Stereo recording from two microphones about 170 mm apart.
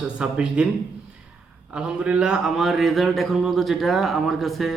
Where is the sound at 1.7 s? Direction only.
5° right (ahead or behind).